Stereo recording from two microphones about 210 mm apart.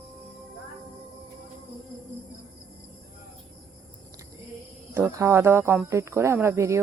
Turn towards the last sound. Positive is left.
turn(degrees=-15)  # may be behind; listen again after turning